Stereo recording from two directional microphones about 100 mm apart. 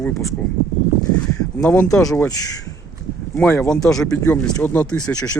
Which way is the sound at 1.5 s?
15° left (ahead or behind).